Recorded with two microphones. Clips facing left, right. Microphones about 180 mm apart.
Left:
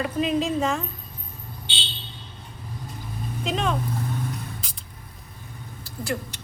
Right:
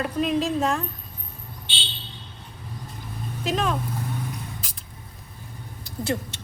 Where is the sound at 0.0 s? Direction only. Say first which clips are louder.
Even; centre (ahead or behind).